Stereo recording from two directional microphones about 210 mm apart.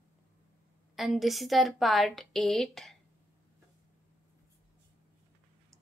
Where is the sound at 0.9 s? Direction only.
Centre (ahead or behind).